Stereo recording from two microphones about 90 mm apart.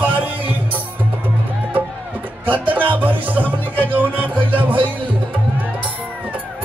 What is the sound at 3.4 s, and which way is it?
Music, 20° left (ahead or behind).